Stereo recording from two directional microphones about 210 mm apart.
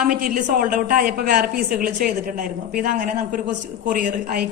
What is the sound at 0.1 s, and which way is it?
A woman's voice, 40° right (ahead or behind).